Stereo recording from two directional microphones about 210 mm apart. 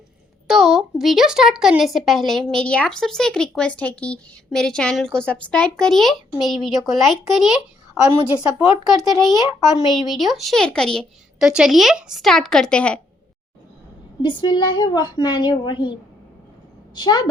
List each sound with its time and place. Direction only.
0.4 s a woman's voice: centre (ahead or behind)
14.2 s a woman's voice: 20° left (ahead or behind)